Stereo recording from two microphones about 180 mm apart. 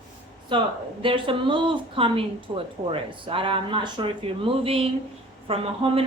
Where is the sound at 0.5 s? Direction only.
25° right (ahead or behind).